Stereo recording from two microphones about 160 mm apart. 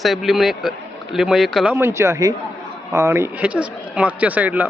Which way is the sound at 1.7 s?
15° right (ahead or behind).